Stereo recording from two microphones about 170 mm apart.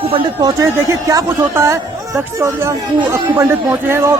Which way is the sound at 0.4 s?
20° right (ahead or behind).